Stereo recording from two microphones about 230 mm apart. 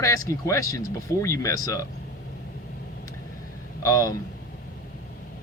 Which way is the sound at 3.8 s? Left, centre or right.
Centre.